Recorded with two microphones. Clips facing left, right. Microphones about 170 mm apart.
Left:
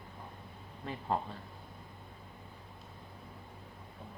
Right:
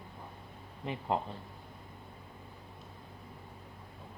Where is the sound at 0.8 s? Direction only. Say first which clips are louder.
Right 2 dB; 15° right (ahead or behind).